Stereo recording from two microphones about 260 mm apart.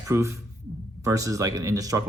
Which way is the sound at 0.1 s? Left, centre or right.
Centre.